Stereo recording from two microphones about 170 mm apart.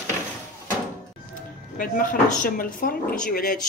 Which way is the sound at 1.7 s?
55° left (ahead or behind).